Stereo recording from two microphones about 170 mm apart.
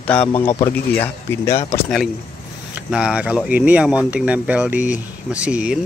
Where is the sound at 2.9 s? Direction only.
5° right (ahead or behind).